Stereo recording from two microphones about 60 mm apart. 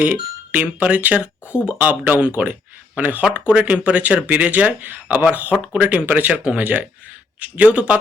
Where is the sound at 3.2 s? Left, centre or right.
Centre.